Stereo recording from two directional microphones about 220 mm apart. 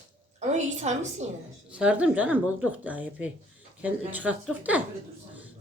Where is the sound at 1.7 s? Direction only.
5° right (ahead or behind).